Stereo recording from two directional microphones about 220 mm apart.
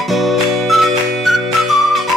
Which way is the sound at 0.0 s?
Centre (ahead or behind).